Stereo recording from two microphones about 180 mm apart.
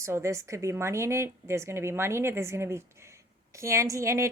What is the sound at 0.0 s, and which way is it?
Speech, 15° right (ahead or behind).